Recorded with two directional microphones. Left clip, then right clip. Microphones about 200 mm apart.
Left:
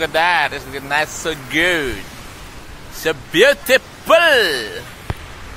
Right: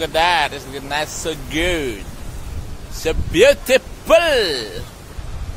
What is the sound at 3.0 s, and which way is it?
Speech, 5° left (ahead or behind).